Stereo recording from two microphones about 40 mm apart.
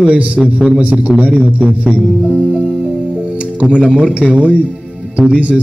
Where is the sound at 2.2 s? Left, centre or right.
Right.